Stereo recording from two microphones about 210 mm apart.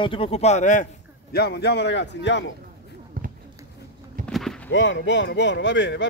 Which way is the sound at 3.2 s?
45° right (ahead or behind).